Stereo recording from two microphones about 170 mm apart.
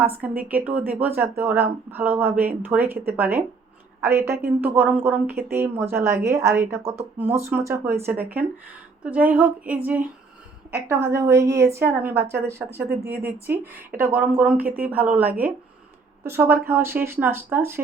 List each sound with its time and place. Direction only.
0.0 s a woman's voice: 10° right (ahead or behind)